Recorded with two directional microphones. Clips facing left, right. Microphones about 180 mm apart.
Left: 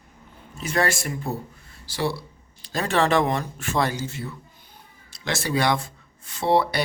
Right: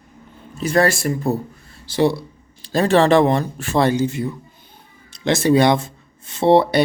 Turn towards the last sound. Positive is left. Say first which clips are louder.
# right 7 dB
turn(degrees=-25)  # may be behind; listen again after turning